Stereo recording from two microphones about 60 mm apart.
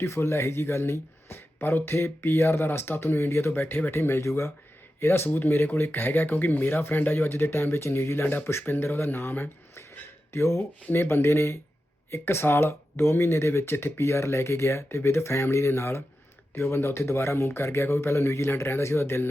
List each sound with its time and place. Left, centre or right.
0.0 s speech: left
4.2 s speech: left
4.9 s speech: left